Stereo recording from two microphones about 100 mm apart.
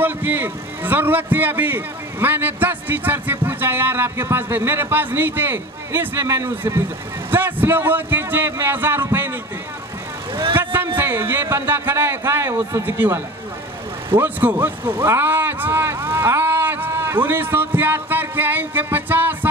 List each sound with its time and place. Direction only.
0.0 s a man's voice: 20° right (ahead or behind)
10.5 s a sound: 20° right (ahead or behind)
11.0 s a man's voice: 20° right (ahead or behind)